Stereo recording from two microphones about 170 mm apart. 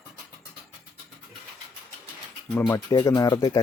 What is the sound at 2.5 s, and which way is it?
Speech, 20° left (ahead or behind).